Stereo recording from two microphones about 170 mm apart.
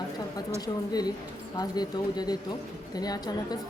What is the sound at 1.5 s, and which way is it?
A woman's voice, 25° left (ahead or behind).